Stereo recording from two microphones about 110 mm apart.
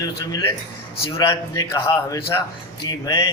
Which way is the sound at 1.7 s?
25° left (ahead or behind).